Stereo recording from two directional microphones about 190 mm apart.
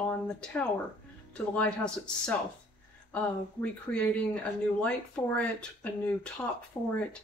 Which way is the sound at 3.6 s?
5° left (ahead or behind).